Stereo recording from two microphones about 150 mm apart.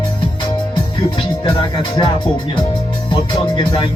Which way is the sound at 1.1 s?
35° left (ahead or behind).